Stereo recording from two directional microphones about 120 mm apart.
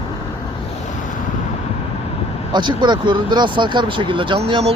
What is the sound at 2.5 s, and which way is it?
Speech, 40° right (ahead or behind).